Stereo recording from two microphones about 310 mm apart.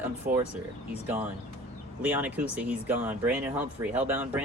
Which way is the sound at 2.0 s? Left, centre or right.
Centre.